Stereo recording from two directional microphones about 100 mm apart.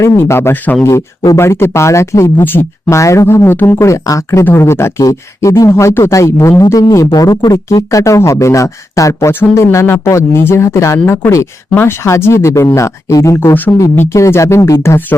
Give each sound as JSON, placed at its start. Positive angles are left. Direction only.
{"t": 0.0, "sound": "speech", "side_deg": 25}